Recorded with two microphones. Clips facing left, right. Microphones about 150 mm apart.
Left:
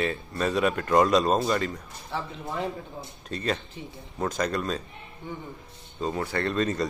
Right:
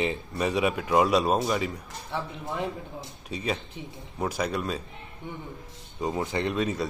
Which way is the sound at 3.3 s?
10° right (ahead or behind).